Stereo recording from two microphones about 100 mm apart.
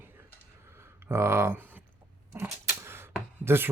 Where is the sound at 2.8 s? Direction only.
25° right (ahead or behind).